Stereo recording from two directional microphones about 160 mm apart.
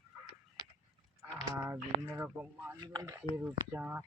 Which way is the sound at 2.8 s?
25° right (ahead or behind).